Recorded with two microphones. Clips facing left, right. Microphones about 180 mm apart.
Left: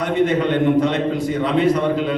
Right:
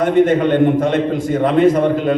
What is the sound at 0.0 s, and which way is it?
A man's voice, 50° right (ahead or behind).